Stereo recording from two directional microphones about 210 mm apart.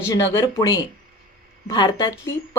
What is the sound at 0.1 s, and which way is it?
A woman's voice, 15° left (ahead or behind).